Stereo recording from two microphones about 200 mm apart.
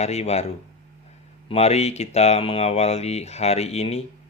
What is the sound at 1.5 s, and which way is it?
Speech, 30° left (ahead or behind).